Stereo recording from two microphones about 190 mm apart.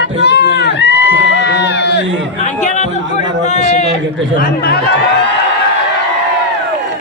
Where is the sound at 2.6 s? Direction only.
40° left (ahead or behind).